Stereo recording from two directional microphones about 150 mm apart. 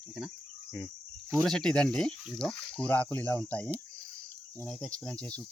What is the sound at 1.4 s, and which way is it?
Speech, 5° left (ahead or behind).